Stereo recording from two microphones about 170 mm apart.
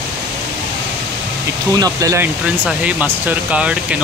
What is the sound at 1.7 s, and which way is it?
Speech, 20° right (ahead or behind).